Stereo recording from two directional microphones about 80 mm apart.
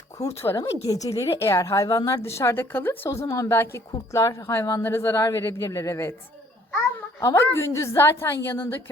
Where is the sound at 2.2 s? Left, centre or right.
Left.